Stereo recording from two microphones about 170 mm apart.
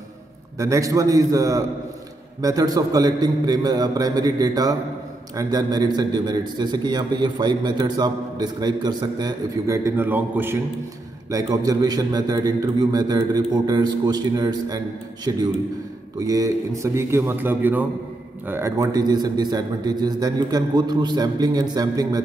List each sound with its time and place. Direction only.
0.6 s a man's voice: 20° right (ahead or behind)